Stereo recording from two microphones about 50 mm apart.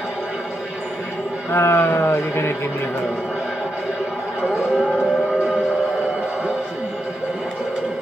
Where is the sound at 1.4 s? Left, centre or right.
Left.